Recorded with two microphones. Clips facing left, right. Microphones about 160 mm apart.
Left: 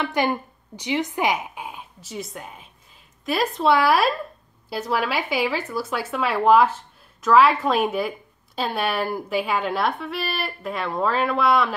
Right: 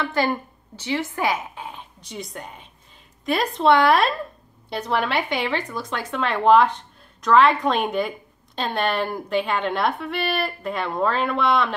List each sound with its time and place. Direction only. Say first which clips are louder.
0.0 s speech: even; 15° left (ahead or behind)